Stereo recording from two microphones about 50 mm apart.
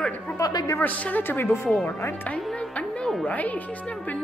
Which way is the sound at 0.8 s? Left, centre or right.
Left.